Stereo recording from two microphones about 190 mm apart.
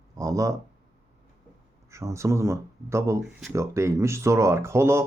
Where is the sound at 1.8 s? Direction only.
15° right (ahead or behind).